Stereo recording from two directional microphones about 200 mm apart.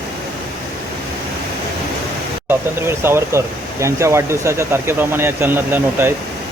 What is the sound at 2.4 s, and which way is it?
Speech, 10° right (ahead or behind).